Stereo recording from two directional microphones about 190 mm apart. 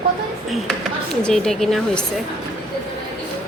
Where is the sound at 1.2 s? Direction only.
5° left (ahead or behind).